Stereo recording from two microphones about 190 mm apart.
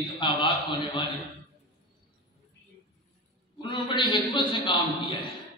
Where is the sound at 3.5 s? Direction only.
25° left (ahead or behind).